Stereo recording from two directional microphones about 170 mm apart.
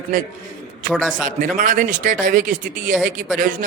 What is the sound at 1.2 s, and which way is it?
Speech, 50° right (ahead or behind).